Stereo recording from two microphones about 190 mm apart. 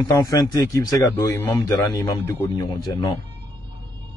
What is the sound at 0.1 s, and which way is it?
A man's voice, 20° left (ahead or behind).